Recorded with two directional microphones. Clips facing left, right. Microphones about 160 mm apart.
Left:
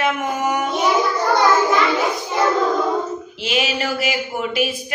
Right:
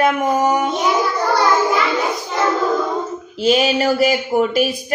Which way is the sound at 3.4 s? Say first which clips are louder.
Right 7 dB; 35° right (ahead or behind).